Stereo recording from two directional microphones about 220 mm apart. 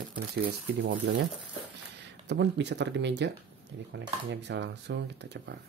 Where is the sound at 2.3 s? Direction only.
50° right (ahead or behind).